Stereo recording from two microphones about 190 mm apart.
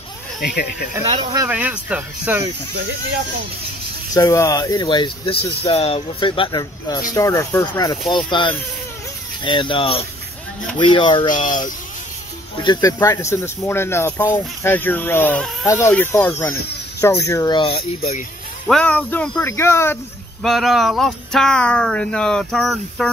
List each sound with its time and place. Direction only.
0.4 s speech: 55° left (ahead or behind)
1.3 s speech: 10° right (ahead or behind)
4.1 s speech: 15° left (ahead or behind)
11.4 s speech: 45° left (ahead or behind)
12.6 s speech: 15° left (ahead or behind)
18.7 s speech: 5° left (ahead or behind)
20.4 s speech: centre (ahead or behind)